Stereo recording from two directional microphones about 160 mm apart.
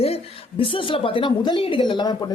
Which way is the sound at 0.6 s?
35° left (ahead or behind).